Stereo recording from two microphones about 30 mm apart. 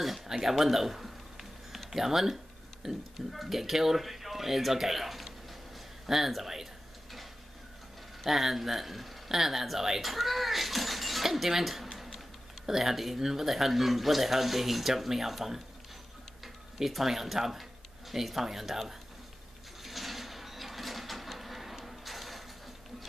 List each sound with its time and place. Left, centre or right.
0.3 s speech: centre
3.2 s speech: centre
8.3 s speech: centre
16.7 s speech: centre
19.8 s a sound: centre